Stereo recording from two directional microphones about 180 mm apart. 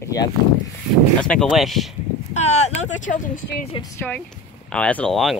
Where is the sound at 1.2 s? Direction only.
5° left (ahead or behind).